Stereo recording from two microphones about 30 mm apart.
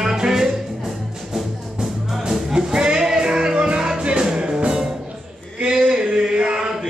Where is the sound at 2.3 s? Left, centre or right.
Centre.